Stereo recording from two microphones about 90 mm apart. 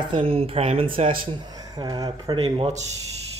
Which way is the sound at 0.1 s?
90° right.